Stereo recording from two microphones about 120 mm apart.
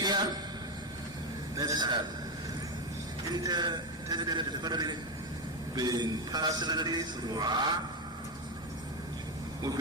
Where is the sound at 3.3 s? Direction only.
35° right (ahead or behind).